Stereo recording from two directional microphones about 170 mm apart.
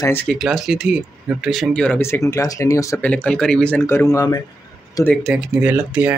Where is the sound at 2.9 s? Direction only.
5° left (ahead or behind).